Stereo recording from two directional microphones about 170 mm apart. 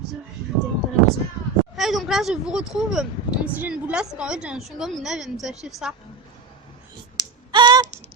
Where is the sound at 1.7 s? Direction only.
Centre (ahead or behind).